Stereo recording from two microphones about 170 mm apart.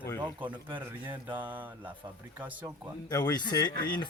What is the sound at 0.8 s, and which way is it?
Speech, 10° right (ahead or behind).